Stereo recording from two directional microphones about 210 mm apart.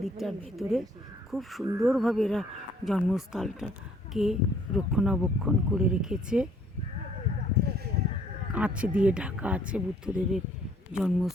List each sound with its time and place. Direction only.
0.0 s speech: centre (ahead or behind)
8.5 s speech: 5° right (ahead or behind)